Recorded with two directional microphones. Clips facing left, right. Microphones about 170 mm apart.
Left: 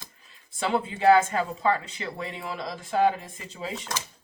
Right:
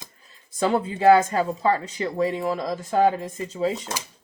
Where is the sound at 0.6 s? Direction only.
40° right (ahead or behind).